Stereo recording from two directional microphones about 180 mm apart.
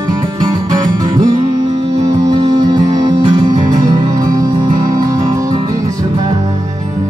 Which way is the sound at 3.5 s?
40° right (ahead or behind).